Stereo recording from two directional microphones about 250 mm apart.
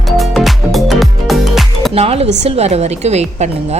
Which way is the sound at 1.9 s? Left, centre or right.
Right.